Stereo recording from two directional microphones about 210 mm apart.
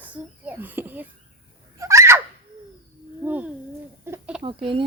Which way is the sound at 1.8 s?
15° right (ahead or behind).